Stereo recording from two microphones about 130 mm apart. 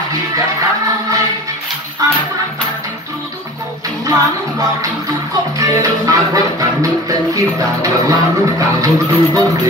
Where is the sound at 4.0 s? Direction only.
25° right (ahead or behind).